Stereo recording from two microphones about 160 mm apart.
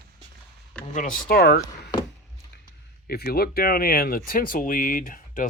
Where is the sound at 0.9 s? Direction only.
55° left (ahead or behind); by 1.6 s 70° left (ahead or behind).